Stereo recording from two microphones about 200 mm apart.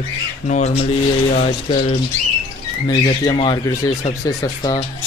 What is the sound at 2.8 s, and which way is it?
Speech, 25° left (ahead or behind).